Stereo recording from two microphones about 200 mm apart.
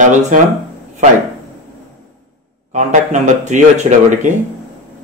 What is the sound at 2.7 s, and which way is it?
Speech, 40° right (ahead or behind).